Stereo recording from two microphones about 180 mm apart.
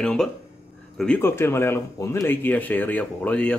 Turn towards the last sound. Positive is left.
turn(degrees=5)  # may be behind; listen again after turning